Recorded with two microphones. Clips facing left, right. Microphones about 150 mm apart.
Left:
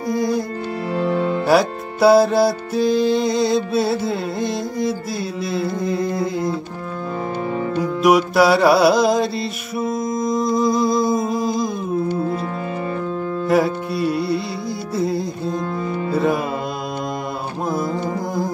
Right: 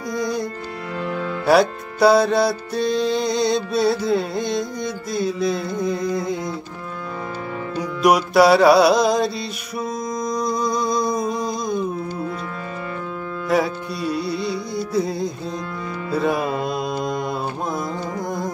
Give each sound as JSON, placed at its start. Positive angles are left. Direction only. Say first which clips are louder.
{"t": 0.2, "sound": "music", "louder": "left 1 dB", "side_deg": 5}
{"t": 0.9, "sound": "music", "louder": "left 6 dB", "side_deg": 35}
{"t": 1.4, "sound": "music", "louder": "right 3 dB", "side_deg": 0}
{"t": 8.0, "sound": "music", "louder": "even", "side_deg": 0}
{"t": 13.5, "sound": "music", "louder": "left 2 dB", "side_deg": 0}